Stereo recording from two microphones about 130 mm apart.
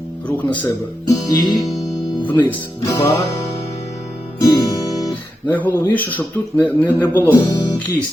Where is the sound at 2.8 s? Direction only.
25° left (ahead or behind).